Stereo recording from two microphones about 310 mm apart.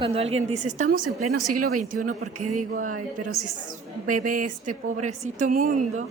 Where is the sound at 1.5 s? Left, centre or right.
Right.